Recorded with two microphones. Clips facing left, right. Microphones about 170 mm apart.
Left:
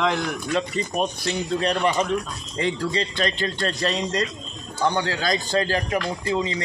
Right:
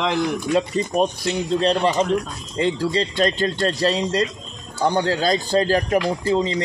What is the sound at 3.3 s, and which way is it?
Speech, 40° right (ahead or behind).